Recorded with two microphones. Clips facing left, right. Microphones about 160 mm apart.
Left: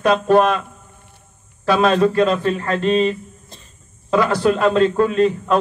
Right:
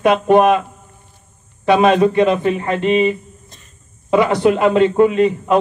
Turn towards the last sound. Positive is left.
turn(degrees=-20)  # may be behind; listen again after turning